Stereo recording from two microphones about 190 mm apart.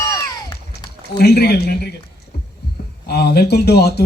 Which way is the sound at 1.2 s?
60° left (ahead or behind).